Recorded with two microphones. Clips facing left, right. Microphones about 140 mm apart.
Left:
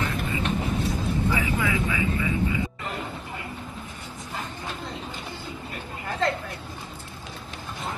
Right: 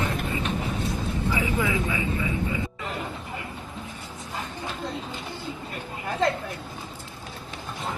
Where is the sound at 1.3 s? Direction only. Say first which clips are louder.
Even; 20° right (ahead or behind).